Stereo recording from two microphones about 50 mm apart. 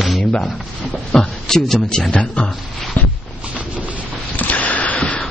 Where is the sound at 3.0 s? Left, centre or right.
Left.